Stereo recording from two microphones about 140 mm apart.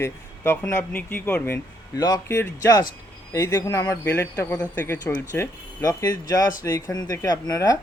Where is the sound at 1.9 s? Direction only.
25° left (ahead or behind).